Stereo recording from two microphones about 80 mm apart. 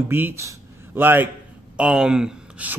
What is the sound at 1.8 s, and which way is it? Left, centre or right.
Speech, centre.